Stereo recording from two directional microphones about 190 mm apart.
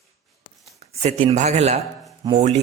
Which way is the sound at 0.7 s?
35° right (ahead or behind).